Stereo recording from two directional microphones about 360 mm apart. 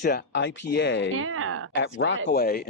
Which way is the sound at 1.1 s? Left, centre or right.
Right.